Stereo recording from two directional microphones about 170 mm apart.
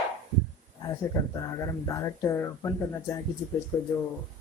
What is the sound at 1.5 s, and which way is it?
A man's voice, 20° left (ahead or behind).